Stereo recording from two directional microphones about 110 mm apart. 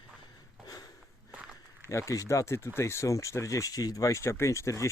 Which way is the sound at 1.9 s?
30° left (ahead or behind).